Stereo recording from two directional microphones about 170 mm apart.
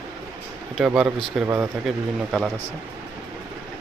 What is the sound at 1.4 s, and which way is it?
Speech, 15° right (ahead or behind).